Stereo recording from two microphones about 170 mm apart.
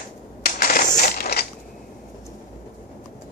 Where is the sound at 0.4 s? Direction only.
60° left (ahead or behind).